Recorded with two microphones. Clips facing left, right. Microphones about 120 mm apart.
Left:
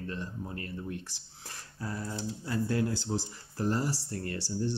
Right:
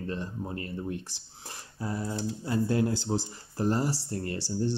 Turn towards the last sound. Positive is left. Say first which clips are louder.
# right 3 dB
turn(degrees=-25)  # may be behind; listen again after turning